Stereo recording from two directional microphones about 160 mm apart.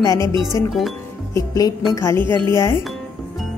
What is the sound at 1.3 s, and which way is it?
Speech, 25° left (ahead or behind).